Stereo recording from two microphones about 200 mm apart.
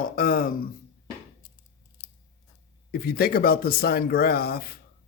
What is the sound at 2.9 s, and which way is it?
Speech, 50° left (ahead or behind).